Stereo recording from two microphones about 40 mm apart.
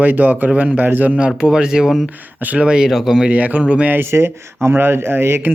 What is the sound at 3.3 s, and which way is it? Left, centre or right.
Speech, right.